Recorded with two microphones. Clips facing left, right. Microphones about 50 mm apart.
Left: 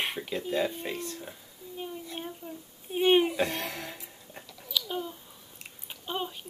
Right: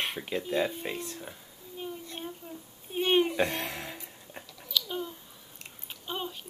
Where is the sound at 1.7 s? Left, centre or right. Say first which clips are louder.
Left 1 dB; centre.